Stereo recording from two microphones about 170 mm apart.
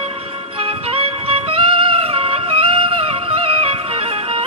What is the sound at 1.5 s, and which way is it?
Music, 35° right (ahead or behind).